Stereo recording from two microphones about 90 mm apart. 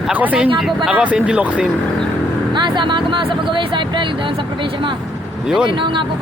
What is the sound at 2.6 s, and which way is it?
Speech, 60° right (ahead or behind).